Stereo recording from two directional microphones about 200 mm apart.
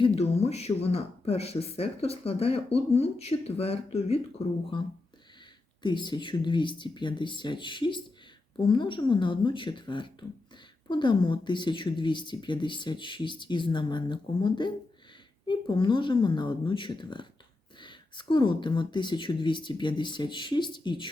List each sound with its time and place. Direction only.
0.2 s speech: 30° left (ahead or behind)